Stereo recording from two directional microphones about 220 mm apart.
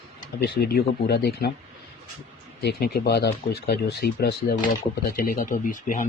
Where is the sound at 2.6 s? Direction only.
45° left (ahead or behind).